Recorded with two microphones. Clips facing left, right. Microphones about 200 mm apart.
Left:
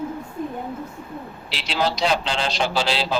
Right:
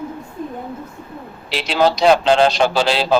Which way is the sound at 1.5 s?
55° right (ahead or behind).